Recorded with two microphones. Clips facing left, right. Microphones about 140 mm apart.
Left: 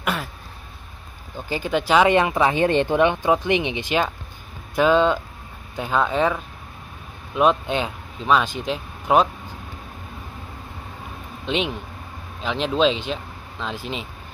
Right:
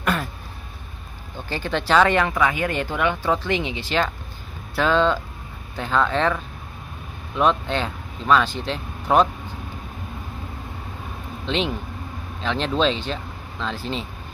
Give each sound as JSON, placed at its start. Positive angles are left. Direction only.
{"t": 0.0, "sound": "a sound", "side_deg": 10}
{"t": 1.5, "sound": "speech", "side_deg": 10}
{"t": 12.4, "sound": "speech", "side_deg": 5}